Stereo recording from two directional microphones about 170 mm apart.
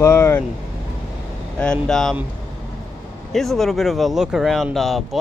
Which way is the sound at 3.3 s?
Centre (ahead or behind).